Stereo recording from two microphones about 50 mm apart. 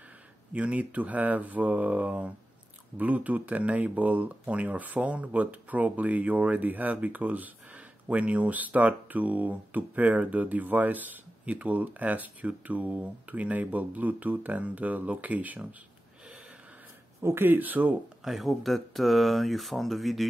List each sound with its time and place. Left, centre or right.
0.5 s speech: right
17.2 s speech: right
17.5 s speech: right
18.2 s speech: centre